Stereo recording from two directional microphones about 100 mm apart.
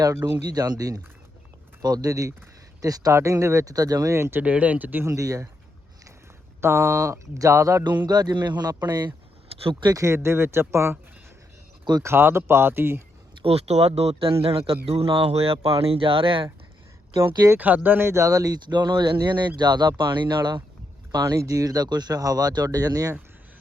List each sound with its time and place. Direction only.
0.5 s speech: 40° right (ahead or behind); by 5.1 s 20° right (ahead or behind)
5.1 s speech: 30° right (ahead or behind)
6.6 s speech: 25° right (ahead or behind)
7.9 s speech: 45° right (ahead or behind)
9.9 s speech: 30° right (ahead or behind)
12.0 s speech: 25° right (ahead or behind)
13.4 s a man's voice: 85° right
15.5 s speech: 70° right (ahead or behind)
17.5 s speech: 20° right (ahead or behind); by 23.1 s 40° right (ahead or behind)